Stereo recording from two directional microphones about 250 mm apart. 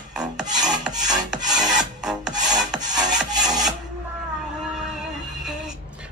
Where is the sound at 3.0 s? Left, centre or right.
Centre.